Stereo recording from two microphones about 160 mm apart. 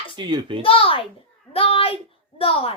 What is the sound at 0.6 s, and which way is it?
A child's voice, 35° left (ahead or behind).